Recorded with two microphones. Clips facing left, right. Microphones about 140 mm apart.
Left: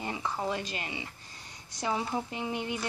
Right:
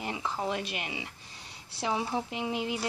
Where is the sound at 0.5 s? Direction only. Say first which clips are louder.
Right 1 dB; 15° right (ahead or behind).